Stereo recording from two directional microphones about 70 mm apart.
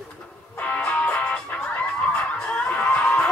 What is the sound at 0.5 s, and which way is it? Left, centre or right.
Music, centre.